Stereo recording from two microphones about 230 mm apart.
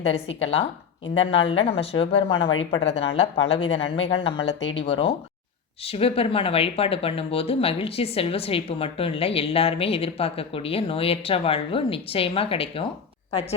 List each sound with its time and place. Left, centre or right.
0.1 s speech: left